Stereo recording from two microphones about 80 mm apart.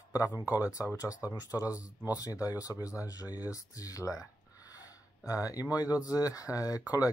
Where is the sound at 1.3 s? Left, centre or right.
Left.